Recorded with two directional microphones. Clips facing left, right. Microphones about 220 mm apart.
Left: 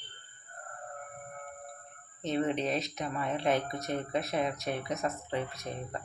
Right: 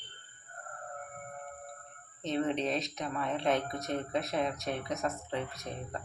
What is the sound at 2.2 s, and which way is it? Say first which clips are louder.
Speech: left 1 dB; centre (ahead or behind).